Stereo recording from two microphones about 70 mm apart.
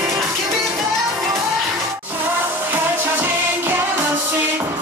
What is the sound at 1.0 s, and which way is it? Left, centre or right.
Music, right.